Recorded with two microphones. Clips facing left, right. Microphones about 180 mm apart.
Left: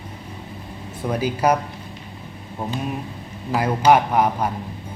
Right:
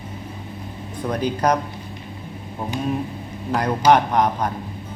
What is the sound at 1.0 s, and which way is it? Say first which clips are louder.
Speech: even; 5° left (ahead or behind).